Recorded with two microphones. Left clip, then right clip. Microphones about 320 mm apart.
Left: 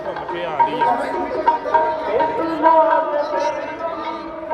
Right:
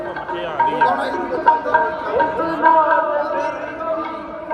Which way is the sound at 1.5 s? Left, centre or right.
Left.